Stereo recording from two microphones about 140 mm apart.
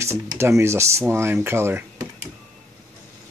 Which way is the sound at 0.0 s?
20° right (ahead or behind).